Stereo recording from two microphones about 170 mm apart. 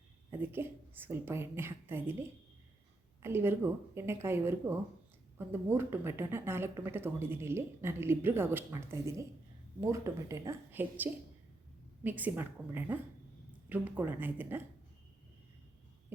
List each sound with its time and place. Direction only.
0.3 s speech: 15° right (ahead or behind)
3.2 s speech: 15° right (ahead or behind)